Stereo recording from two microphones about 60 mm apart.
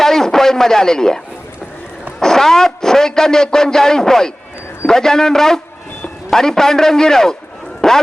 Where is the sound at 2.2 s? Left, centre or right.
Centre.